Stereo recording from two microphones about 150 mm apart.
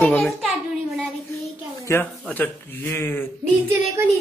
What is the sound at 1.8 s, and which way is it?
A man's voice, 20° left (ahead or behind).